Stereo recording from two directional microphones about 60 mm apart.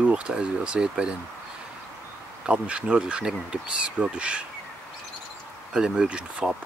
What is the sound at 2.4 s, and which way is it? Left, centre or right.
Speech, centre.